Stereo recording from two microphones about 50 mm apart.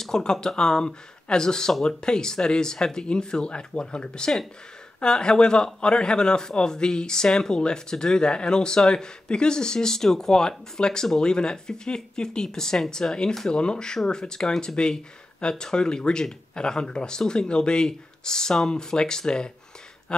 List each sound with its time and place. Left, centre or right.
0.0 s a man's voice: centre